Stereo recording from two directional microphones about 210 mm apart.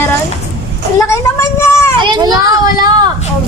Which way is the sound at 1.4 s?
15° left (ahead or behind).